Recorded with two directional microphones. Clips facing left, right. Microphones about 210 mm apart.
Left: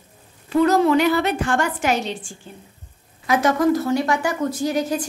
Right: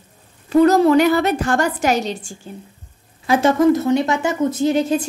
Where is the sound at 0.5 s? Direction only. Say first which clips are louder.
Right 4 dB; 40° right (ahead or behind).